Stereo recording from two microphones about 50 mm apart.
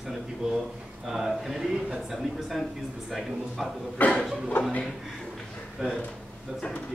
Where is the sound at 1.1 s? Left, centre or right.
Centre.